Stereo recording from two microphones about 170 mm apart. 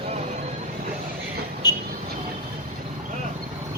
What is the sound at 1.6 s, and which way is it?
Vehicle, 25° left (ahead or behind).